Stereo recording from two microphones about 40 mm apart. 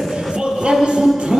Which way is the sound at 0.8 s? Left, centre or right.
Centre.